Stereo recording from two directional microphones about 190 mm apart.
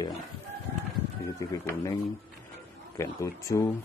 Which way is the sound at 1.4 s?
15° left (ahead or behind).